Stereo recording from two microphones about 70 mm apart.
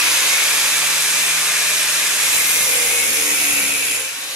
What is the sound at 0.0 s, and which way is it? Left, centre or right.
Steam, centre.